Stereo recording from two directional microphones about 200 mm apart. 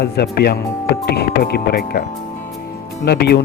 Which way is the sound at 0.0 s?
55° left (ahead or behind).